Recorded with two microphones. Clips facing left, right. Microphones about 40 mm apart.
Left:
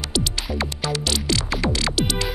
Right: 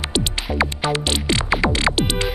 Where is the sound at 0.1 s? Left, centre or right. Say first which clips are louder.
Even; right.